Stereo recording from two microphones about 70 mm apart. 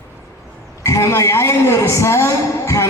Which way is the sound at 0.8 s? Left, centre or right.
Left.